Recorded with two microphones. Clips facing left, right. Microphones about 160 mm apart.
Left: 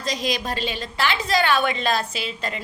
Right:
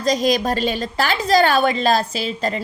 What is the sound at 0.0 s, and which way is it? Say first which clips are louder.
A woman's voice: right 8 dB; 40° right (ahead or behind).